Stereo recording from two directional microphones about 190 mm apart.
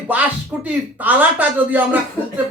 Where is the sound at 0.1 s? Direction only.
10° right (ahead or behind).